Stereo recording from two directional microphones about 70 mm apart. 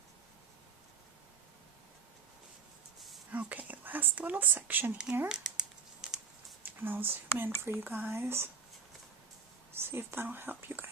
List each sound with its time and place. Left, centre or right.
3.3 s whispering: right
5.3 s a sound: centre
6.7 s speech: right
9.8 s speech: right